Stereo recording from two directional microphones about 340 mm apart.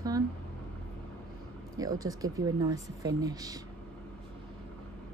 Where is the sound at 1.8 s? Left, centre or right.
Centre.